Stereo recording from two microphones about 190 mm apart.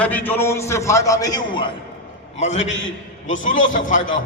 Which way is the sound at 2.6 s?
80° left.